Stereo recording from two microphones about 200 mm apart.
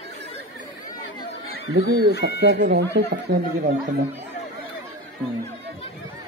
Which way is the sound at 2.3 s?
60° right (ahead or behind).